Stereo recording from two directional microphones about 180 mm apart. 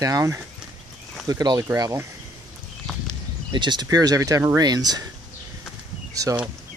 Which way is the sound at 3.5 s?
25° right (ahead or behind).